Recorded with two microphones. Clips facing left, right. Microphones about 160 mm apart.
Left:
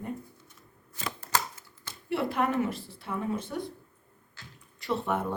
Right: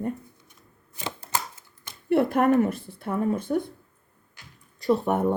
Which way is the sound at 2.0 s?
50° right (ahead or behind).